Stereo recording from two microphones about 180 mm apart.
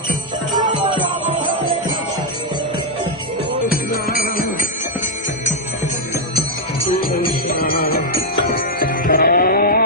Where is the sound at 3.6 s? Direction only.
55° left (ahead or behind).